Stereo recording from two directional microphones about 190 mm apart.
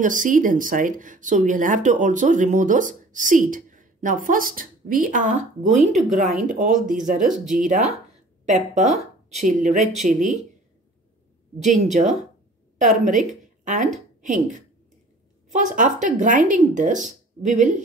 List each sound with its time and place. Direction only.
0.0 s speech: 45° right (ahead or behind)
11.6 s a woman's voice: 40° right (ahead or behind)